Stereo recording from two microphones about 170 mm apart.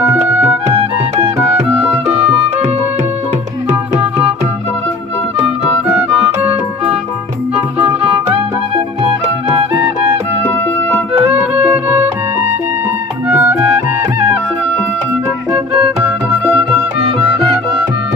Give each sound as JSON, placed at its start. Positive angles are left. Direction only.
{"t": 0.7, "sound": "music", "side_deg": -30}
{"t": 5.9, "sound": "music", "side_deg": -10}
{"t": 11.2, "sound": "music", "side_deg": -10}
{"t": 13.2, "sound": "music", "side_deg": -10}